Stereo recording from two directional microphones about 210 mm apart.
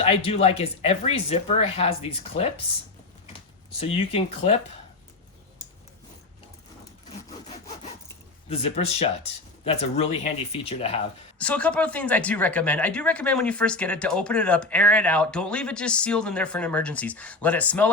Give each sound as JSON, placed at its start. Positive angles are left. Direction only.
{"t": 0.0, "sound": "speech", "side_deg": 30}
{"t": 3.8, "sound": "speech", "side_deg": 30}
{"t": 8.4, "sound": "speech", "side_deg": 30}
{"t": 11.3, "sound": "speech", "side_deg": 5}